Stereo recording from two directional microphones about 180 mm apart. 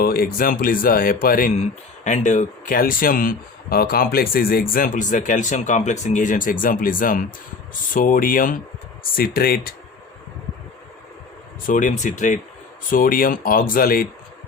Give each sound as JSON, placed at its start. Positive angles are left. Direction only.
{"t": 0.0, "sound": "speech", "side_deg": 55}
{"t": 2.0, "sound": "speech", "side_deg": 40}
{"t": 11.6, "sound": "speech", "side_deg": 45}